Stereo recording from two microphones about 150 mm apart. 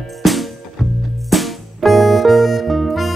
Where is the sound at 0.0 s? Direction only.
Centre (ahead or behind).